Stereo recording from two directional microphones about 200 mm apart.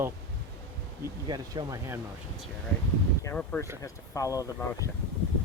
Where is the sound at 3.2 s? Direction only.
10° left (ahead or behind).